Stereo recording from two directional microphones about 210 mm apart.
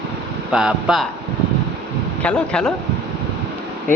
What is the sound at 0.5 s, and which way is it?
Speech, centre (ahead or behind).